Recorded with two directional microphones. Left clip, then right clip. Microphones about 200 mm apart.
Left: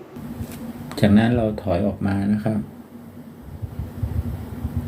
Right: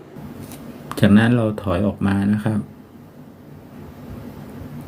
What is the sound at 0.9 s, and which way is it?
Speech, 30° right (ahead or behind).